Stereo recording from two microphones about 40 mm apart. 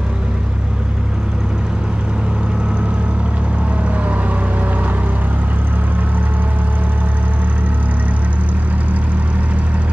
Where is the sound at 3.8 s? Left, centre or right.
Right.